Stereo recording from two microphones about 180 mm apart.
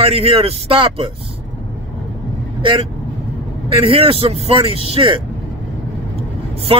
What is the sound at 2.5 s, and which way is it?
Speech, 30° right (ahead or behind).